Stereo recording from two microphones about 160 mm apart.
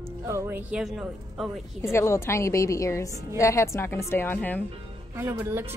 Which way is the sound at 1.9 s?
15° left (ahead or behind).